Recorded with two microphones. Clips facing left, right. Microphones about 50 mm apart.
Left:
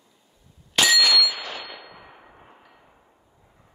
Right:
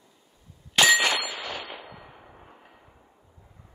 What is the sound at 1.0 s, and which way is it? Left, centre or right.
Clang, right.